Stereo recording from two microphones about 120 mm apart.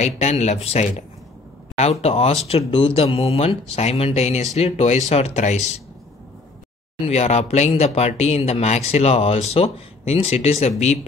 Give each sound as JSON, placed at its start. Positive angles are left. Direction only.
{"t": 0.0, "sound": "speech", "side_deg": 65}
{"t": 7.1, "sound": "speech", "side_deg": 65}